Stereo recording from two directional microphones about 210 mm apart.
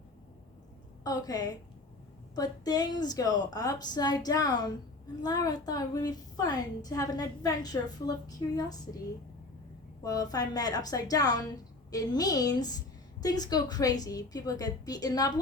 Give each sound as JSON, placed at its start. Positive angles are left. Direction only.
{"t": 1.0, "sound": "a woman's voice", "side_deg": 20}
{"t": 10.0, "sound": "a woman's voice", "side_deg": 15}